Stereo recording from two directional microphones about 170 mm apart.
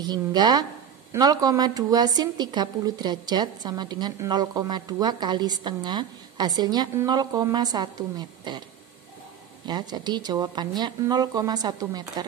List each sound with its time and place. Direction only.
0.0 s a woman's voice: 25° right (ahead or behind)
9.7 s a woman's voice: 25° right (ahead or behind)